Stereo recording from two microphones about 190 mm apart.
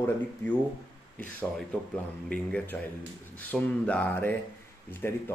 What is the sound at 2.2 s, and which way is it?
Speech, 5° left (ahead or behind).